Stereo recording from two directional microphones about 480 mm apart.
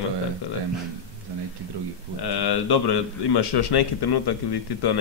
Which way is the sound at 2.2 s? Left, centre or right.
Left.